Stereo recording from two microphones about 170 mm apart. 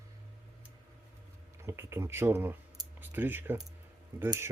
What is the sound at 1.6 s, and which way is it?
Speech, 15° right (ahead or behind).